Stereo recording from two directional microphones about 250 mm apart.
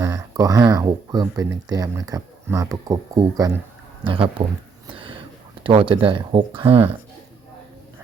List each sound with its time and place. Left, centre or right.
0.0 s speech: centre
4.9 s whispering: right
5.6 s speech: right